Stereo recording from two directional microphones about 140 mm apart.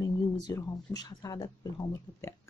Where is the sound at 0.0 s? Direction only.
25° left (ahead or behind).